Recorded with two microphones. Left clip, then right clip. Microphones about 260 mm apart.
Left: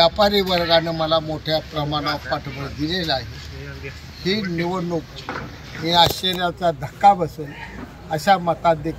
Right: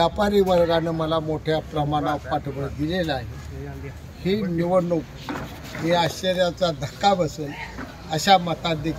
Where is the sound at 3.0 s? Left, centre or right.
Right.